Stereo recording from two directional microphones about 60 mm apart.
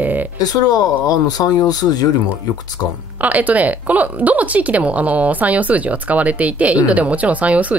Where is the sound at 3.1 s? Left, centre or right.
Right.